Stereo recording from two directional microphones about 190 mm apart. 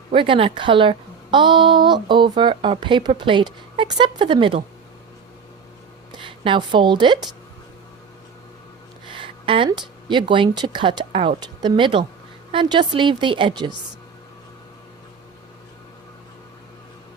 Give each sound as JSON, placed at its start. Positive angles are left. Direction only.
{"t": 0.1, "sound": "a woman's voice", "side_deg": -25}
{"t": 6.1, "sound": "a woman's voice", "side_deg": -25}
{"t": 9.0, "sound": "a woman's voice", "side_deg": -25}